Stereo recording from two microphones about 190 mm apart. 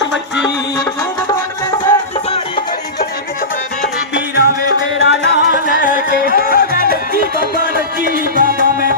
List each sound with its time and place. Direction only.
0.0 s music: 65° left (ahead or behind)
4.1 s music: 65° left (ahead or behind); by 6.8 s 50° left (ahead or behind)
8.0 s music: 50° right (ahead or behind)